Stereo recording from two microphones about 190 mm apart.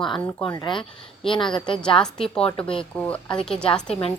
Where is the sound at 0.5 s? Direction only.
25° left (ahead or behind).